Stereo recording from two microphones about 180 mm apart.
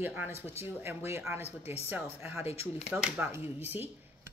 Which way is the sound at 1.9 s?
10° right (ahead or behind).